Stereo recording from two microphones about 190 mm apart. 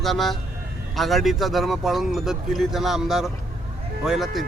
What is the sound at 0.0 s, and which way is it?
Speech, centre (ahead or behind).